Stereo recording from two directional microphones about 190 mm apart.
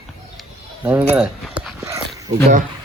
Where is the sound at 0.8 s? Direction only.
10° right (ahead or behind).